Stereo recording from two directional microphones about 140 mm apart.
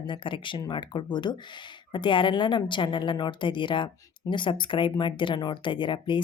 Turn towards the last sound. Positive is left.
turn(degrees=35)  # may be behind; listen again after turning